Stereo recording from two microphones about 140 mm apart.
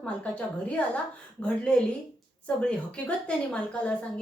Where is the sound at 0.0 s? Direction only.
10° left (ahead or behind).